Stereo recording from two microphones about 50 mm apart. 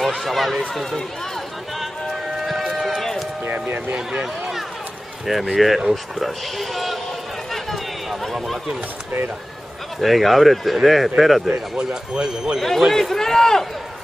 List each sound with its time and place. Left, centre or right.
0.0 s speech: centre
1.8 s run: centre
3.4 s speech: right
3.9 s speech: centre
7.5 s chatter: centre
9.9 s speech: centre
11.4 s speech: centre
12.5 s speech: centre